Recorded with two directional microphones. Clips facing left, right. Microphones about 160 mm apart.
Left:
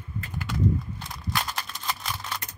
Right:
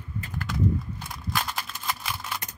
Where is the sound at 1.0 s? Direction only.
5° right (ahead or behind).